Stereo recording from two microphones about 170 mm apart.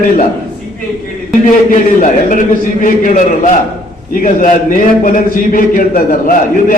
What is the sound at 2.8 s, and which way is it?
A man's voice, 50° left (ahead or behind).